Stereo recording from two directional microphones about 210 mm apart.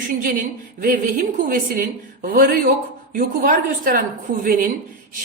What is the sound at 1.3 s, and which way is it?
A woman's voice, 40° right (ahead or behind).